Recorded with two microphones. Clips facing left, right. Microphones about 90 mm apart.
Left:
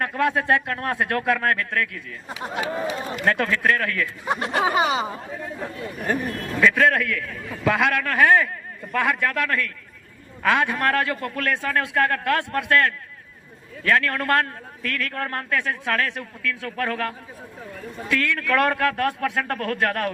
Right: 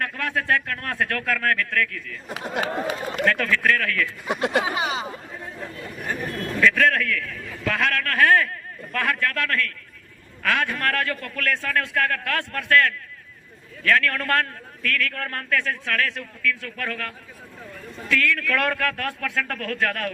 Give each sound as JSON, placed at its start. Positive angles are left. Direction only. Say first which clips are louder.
{"t": 0.0, "sound": "speech", "louder": "left 5 dB", "side_deg": 20}
{"t": 2.3, "sound": "speech", "louder": "right 1 dB", "side_deg": -55}
{"t": 3.2, "sound": "speech", "louder": "left 1 dB", "side_deg": 25}
{"t": 4.6, "sound": "speech", "louder": "left 5 dB", "side_deg": 45}
{"t": 5.5, "sound": "speech", "louder": "left 3 dB", "side_deg": 55}
{"t": 6.6, "sound": "a man's voice", "louder": "left 1 dB", "side_deg": 10}